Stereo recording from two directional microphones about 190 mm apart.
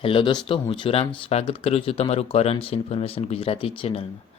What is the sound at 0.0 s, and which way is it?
Speech, 25° left (ahead or behind).